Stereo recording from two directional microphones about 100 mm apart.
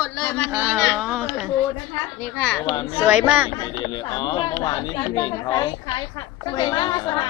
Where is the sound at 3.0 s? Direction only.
15° right (ahead or behind).